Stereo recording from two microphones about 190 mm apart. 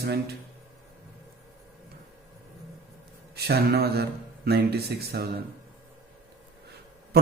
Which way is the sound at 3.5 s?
55° right (ahead or behind).